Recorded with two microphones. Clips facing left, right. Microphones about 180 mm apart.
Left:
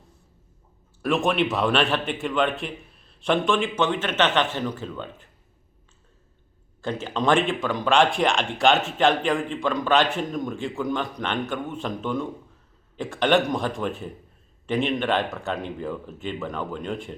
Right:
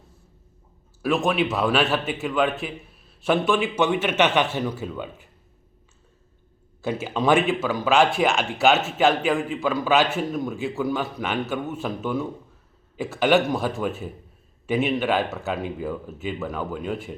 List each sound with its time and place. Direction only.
1.0 s speech: centre (ahead or behind)
6.8 s speech: 10° right (ahead or behind)